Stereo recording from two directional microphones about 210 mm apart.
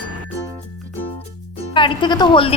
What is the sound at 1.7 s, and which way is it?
Speech, 25° left (ahead or behind).